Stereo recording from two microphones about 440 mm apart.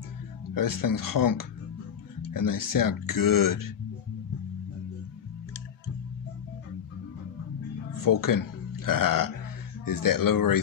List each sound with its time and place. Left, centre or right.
0.6 s speech: left
7.9 s speech: left